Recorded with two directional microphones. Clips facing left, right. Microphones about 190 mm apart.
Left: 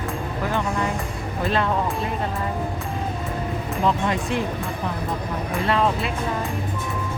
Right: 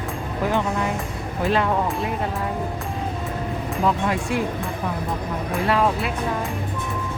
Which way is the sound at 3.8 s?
5° right (ahead or behind).